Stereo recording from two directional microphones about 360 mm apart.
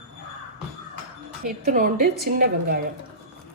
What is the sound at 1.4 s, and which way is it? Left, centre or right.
A woman's voice, right.